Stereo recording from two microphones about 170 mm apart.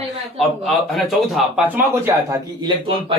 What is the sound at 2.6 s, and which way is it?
Speech, 35° right (ahead or behind).